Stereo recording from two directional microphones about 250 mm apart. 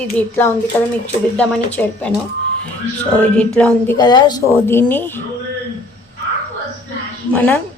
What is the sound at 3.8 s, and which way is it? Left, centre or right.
A woman's voice, centre.